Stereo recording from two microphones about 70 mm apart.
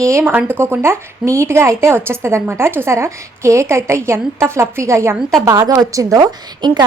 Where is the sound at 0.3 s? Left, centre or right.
Right.